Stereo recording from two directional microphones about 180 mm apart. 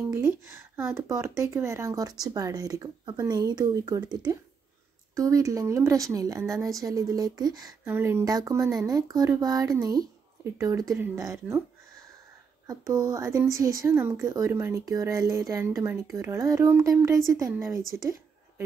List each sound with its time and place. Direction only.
0.1 s a woman's voice: 15° right (ahead or behind)
12.6 s a woman's voice: 20° right (ahead or behind)